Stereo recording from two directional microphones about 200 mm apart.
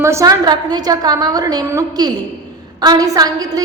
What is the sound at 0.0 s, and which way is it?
A woman's voice, 15° right (ahead or behind).